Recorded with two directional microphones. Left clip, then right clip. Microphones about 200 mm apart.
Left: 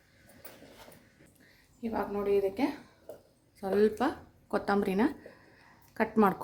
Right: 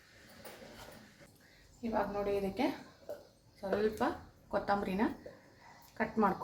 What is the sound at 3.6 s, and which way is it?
A woman's voice, 60° left (ahead or behind).